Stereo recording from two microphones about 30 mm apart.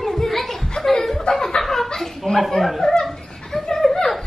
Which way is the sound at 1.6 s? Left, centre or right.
Centre.